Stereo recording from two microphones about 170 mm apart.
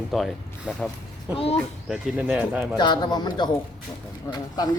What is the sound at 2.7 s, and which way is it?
Speech, 25° left (ahead or behind).